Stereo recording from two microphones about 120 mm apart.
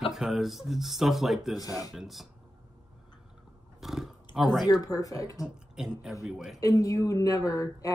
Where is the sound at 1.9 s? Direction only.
Centre (ahead or behind).